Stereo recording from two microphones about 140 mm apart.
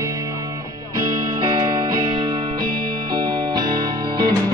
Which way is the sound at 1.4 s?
35° right (ahead or behind).